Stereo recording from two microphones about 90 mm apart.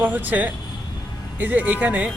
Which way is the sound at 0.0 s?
20° right (ahead or behind).